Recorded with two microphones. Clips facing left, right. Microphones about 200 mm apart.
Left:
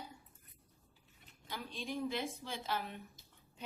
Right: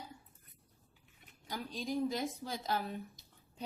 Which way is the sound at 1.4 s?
40° right (ahead or behind).